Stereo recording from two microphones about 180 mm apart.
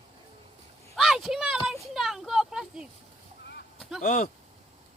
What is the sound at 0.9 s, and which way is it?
Speech, centre (ahead or behind).